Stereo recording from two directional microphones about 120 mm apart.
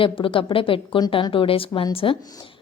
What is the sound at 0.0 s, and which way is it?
A woman's voice, 45° left (ahead or behind).